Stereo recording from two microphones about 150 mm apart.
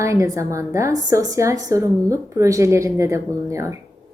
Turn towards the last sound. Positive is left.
turn(degrees=-20)  # may be behind; listen again after turning